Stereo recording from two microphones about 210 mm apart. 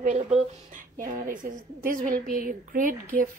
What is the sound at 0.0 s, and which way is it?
Speech, 35° right (ahead or behind).